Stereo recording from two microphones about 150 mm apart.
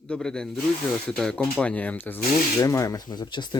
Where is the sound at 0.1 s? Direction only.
5° left (ahead or behind).